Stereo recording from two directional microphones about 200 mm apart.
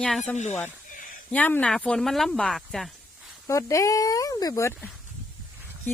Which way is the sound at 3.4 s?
15° left (ahead or behind).